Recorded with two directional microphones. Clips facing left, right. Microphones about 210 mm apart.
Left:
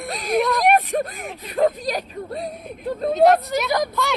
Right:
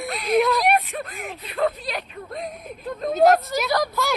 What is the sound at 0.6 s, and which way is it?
Speech, 45° left (ahead or behind).